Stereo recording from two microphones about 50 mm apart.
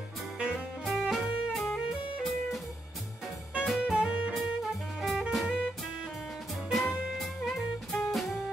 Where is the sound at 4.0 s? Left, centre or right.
Right.